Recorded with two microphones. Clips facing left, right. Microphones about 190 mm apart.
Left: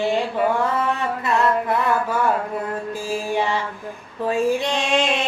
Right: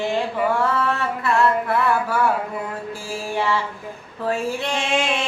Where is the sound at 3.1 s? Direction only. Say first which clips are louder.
Left 1 dB; 20° left (ahead or behind).